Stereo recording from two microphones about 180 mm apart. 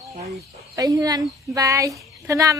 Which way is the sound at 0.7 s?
20° right (ahead or behind).